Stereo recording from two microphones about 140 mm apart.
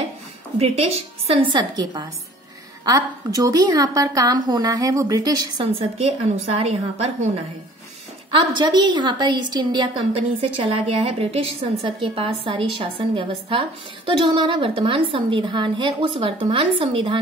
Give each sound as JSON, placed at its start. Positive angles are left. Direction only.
{"t": 0.6, "sound": "a woman's voice", "side_deg": -45}
{"t": 5.8, "sound": "a woman's voice", "side_deg": -45}
{"t": 8.3, "sound": "a woman's voice", "side_deg": -35}